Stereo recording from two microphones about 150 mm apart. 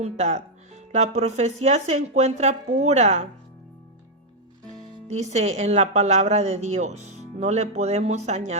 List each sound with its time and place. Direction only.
0.0 s speech: 50° right (ahead or behind)
5.0 s speech: 50° right (ahead or behind)